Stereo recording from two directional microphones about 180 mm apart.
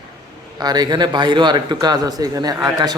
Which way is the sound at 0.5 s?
20° right (ahead or behind).